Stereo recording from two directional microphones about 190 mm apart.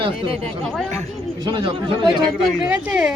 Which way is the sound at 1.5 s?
25° right (ahead or behind).